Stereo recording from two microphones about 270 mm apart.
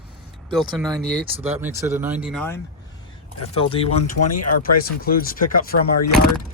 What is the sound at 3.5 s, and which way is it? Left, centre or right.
Speech, left.